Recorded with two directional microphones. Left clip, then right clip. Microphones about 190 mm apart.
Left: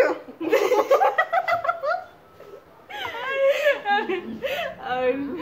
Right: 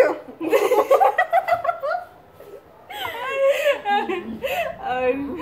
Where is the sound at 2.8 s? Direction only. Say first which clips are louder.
Right 2 dB; 15° right (ahead or behind).